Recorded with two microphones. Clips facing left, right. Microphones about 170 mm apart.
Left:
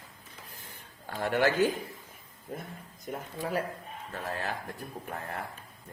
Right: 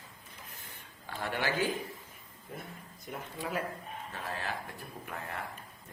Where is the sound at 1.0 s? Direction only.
50° left (ahead or behind).